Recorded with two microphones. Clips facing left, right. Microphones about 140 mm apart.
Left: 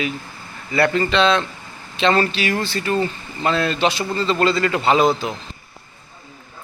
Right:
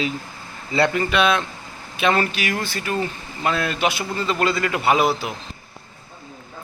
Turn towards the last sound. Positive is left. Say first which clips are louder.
# left 2 dB
turn(degrees=-10)  # may be behind; listen again after turning